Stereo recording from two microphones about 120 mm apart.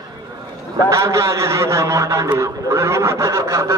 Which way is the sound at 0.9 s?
25° right (ahead or behind).